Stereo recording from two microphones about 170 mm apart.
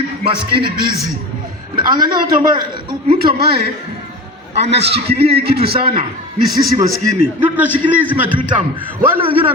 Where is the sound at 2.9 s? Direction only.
60° right (ahead or behind).